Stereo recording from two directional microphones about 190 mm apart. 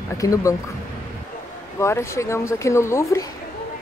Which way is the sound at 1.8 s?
15° left (ahead or behind).